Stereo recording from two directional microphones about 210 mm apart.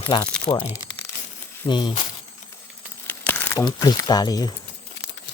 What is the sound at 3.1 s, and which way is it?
Crumpling, 10° left (ahead or behind).